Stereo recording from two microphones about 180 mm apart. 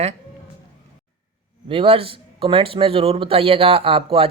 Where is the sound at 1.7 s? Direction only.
30° right (ahead or behind).